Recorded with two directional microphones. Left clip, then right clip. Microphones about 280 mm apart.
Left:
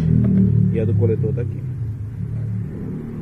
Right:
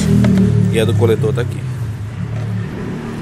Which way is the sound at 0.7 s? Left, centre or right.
Centre.